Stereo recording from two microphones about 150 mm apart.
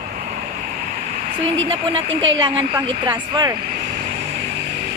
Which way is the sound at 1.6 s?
35° right (ahead or behind).